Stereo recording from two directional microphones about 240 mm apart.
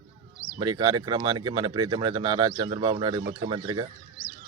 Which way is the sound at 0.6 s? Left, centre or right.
Centre.